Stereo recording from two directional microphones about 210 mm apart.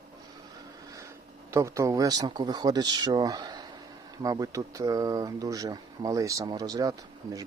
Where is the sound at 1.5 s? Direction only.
15° right (ahead or behind).